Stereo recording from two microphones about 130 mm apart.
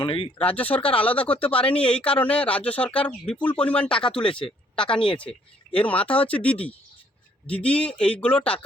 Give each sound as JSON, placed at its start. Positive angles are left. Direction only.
{"t": 0.0, "sound": "speech", "side_deg": 40}
{"t": 0.4, "sound": "speech", "side_deg": 10}
{"t": 4.3, "sound": "speech", "side_deg": 45}
{"t": 4.7, "sound": "speech", "side_deg": 5}